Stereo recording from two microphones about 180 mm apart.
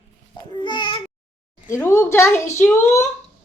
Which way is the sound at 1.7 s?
15° left (ahead or behind).